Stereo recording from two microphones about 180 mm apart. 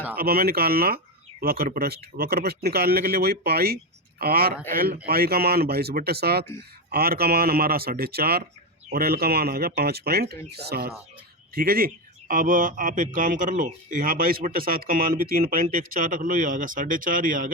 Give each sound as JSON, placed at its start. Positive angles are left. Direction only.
{"t": 0.2, "sound": "a man's voice", "side_deg": -55}